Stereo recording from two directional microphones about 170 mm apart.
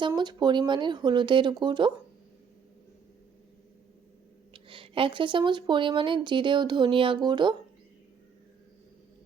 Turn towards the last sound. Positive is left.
turn(degrees=-25)  # may be behind; listen again after turning